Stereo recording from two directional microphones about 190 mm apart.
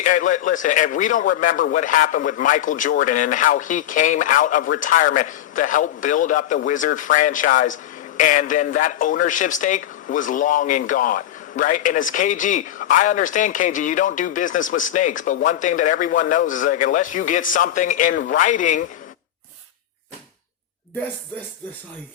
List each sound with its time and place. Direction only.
0.0 s a man's voice: 40° left (ahead or behind)